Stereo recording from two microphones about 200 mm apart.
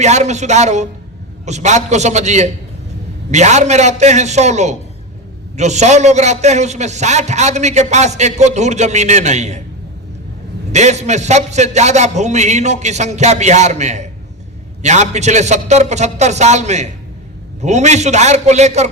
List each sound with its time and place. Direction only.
0.0 s a man's voice: 35° right (ahead or behind)
10.7 s a man's voice: 35° right (ahead or behind)